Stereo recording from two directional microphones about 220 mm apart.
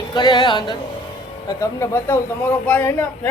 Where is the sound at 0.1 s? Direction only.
20° left (ahead or behind).